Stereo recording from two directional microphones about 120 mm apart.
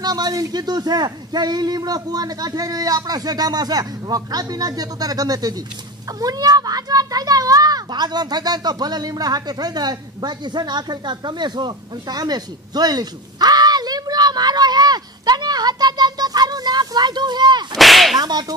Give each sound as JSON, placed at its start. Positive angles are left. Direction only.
{"t": 0.0, "sound": "speech", "side_deg": -35}
{"t": 6.1, "sound": "a sound", "side_deg": -30}
{"t": 17.7, "sound": "whip", "side_deg": 0}
{"t": 18.1, "sound": "whip", "side_deg": -35}